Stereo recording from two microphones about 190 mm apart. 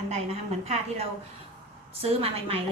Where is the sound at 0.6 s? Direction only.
35° right (ahead or behind).